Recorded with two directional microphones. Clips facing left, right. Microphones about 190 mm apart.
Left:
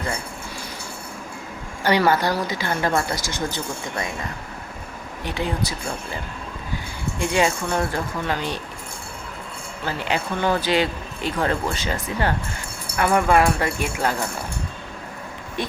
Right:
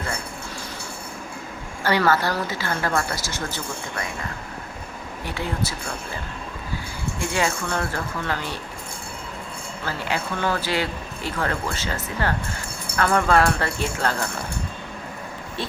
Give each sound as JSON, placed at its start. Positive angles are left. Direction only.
{"t": 1.8, "sound": "a woman's voice", "side_deg": 15}
{"t": 5.2, "sound": "speech", "side_deg": 20}
{"t": 7.2, "sound": "speech", "side_deg": 20}
{"t": 9.8, "sound": "a woman's voice", "side_deg": 20}